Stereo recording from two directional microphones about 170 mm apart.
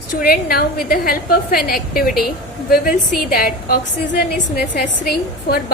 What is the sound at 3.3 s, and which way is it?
A woman's voice, 60° left (ahead or behind).